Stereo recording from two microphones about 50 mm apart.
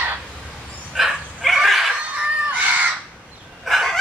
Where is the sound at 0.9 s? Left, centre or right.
Centre.